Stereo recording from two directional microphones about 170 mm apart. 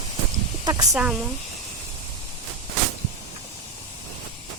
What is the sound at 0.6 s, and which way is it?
Speech, 20° right (ahead or behind).